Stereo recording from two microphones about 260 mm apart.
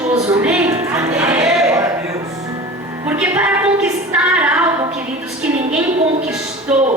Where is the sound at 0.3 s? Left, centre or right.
Centre.